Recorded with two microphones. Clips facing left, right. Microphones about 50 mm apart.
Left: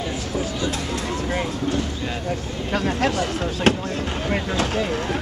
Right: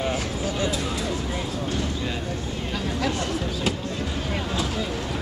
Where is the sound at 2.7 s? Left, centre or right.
Left.